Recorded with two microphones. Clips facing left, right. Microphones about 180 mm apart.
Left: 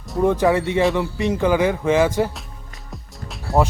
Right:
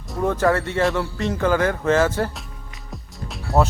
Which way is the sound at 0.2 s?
15° left (ahead or behind).